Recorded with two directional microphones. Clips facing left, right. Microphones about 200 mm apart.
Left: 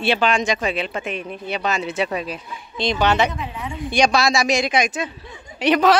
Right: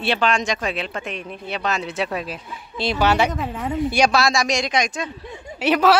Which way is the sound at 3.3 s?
50° right (ahead or behind).